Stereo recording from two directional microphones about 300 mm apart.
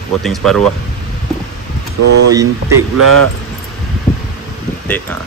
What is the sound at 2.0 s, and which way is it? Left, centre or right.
Speech, right.